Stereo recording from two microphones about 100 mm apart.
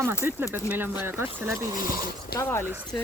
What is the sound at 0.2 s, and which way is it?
Speech, 25° right (ahead or behind).